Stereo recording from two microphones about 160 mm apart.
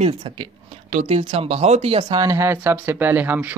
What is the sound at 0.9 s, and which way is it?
Speech, 45° right (ahead or behind).